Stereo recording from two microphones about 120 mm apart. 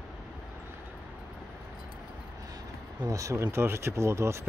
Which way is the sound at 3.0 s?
25° right (ahead or behind).